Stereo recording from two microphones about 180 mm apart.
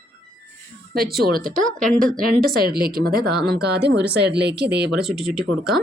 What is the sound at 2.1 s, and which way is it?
Speech, 55° right (ahead or behind).